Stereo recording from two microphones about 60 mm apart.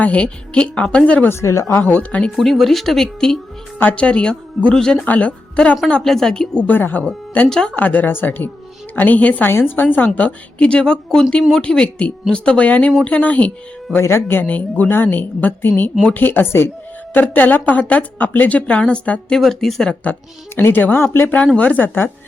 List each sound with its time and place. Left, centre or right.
0.0 s speech: left
1.3 s speech: left
1.8 s speech: left
2.3 s a woman's voice: centre; by 5.7 s left
6.0 s speech: centre
6.7 s a woman's voice: left
9.5 s a woman's voice: left
10.2 s speech: left
14.0 s a woman's voice: left
14.4 s a woman's voice: left
19.4 s speech: centre
20.6 s a woman's voice: left
21.3 s speech: left